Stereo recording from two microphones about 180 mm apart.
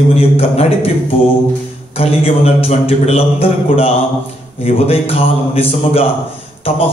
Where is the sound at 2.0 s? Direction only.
35° left (ahead or behind).